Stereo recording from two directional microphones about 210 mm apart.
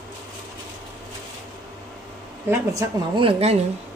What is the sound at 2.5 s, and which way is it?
Speech, 15° right (ahead or behind).